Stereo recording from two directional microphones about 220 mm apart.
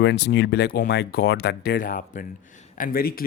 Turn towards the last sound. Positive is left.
turn(degrees=40)  # may be behind; listen again after turning